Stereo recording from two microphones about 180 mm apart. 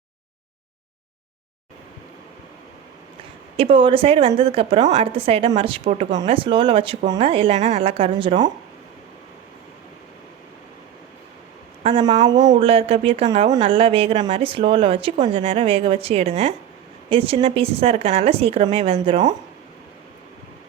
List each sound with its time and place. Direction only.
3.6 s speech: 30° right (ahead or behind)
11.8 s speech: 30° right (ahead or behind)